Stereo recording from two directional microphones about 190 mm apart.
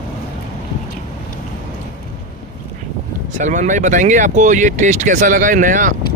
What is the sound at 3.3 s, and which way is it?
Speech, 40° right (ahead or behind).